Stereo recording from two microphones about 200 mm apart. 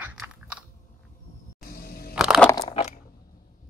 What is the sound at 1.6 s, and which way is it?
Vehicle, 50° left (ahead or behind).